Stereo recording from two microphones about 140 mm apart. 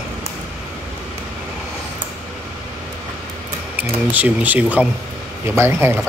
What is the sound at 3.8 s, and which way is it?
A man's voice, 10° right (ahead or behind).